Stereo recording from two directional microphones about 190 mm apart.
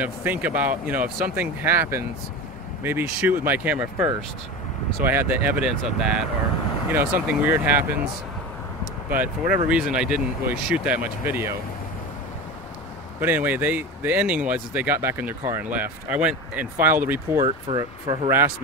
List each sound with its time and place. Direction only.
0.0 s speech: 10° right (ahead or behind)
9.1 s speech: 10° right (ahead or behind)
13.2 s speech: 10° right (ahead or behind)
17.5 s speech: 25° right (ahead or behind)